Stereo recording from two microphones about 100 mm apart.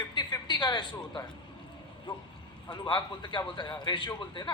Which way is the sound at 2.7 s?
55° left (ahead or behind).